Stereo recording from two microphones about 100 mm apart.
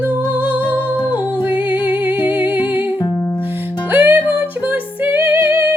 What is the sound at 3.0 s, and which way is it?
Music, 30° left (ahead or behind).